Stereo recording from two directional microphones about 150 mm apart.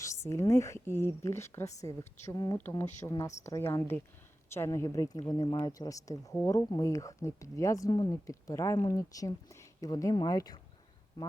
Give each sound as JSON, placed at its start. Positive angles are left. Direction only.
{"t": 0.0, "sound": "speech", "side_deg": 20}